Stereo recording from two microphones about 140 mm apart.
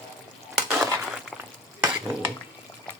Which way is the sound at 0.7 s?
5° right (ahead or behind).